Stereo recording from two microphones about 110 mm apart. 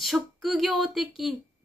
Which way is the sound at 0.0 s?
Centre (ahead or behind).